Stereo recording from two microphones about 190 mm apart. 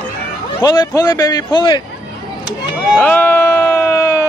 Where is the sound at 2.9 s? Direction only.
10° left (ahead or behind).